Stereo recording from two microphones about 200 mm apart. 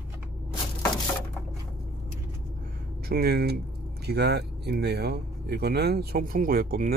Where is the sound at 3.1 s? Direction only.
50° right (ahead or behind).